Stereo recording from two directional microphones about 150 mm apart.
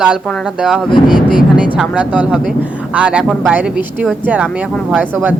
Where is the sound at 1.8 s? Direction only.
10° right (ahead or behind).